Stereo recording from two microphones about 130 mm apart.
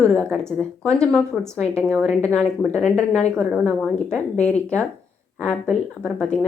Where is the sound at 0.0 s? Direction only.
5° left (ahead or behind).